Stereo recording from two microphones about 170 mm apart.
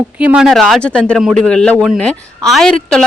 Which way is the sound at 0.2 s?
5° right (ahead or behind).